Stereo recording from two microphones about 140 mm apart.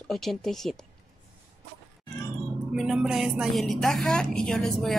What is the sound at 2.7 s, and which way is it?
A woman's voice, 5° right (ahead or behind).